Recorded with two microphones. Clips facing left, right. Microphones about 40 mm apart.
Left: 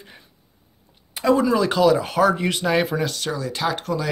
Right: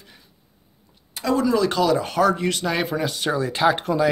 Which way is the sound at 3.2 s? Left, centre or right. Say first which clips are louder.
Right 4 dB; centre.